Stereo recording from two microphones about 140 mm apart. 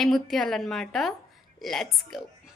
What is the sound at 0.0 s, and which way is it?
A woman's voice, centre (ahead or behind).